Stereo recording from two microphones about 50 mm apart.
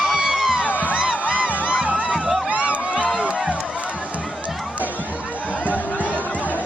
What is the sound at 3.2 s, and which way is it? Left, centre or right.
Run, right.